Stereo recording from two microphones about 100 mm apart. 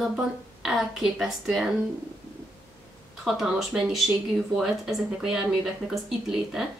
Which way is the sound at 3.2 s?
5° right (ahead or behind).